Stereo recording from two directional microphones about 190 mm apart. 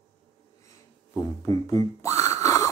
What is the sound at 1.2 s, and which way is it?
Music, 15° left (ahead or behind).